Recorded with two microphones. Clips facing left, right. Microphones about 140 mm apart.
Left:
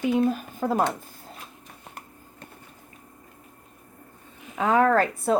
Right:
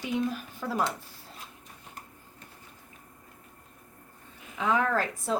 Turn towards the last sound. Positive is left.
turn(degrees=50)  # may be behind; listen again after turning